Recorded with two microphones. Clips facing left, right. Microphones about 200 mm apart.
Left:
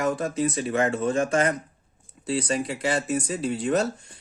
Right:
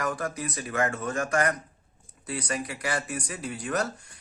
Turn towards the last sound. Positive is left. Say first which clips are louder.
# left 6 dB
turn(degrees=25)  # may be behind; listen again after turning